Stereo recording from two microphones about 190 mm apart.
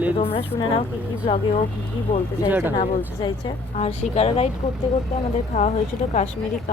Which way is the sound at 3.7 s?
35° left (ahead or behind).